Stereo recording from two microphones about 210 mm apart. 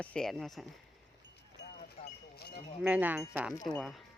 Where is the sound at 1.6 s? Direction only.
50° left (ahead or behind).